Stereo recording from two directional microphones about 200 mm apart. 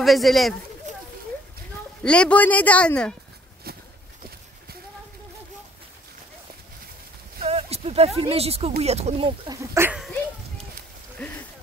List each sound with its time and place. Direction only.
0.0 s speech: centre (ahead or behind)
2.0 s speech: 5° left (ahead or behind)
3.7 s a sound: 50° right (ahead or behind)
7.3 s clip-clop: 30° right (ahead or behind)
8.2 s speech: 30° right (ahead or behind)
9.5 s speech: 15° right (ahead or behind)
11.2 s a sound: 10° left (ahead or behind)